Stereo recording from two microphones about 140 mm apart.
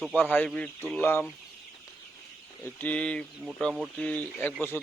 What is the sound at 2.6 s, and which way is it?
Speech, 10° left (ahead or behind).